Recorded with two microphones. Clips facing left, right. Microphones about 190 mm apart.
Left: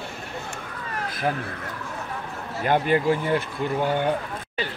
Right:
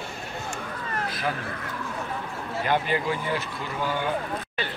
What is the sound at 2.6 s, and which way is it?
Speech, 50° left (ahead or behind).